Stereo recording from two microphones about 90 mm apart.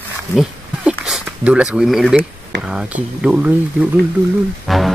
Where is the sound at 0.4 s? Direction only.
5° right (ahead or behind).